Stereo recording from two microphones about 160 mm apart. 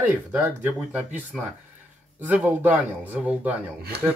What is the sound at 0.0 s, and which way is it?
Speech, 10° right (ahead or behind).